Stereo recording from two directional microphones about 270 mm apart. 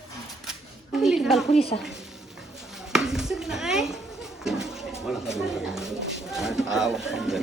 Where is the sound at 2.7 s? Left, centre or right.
Centre.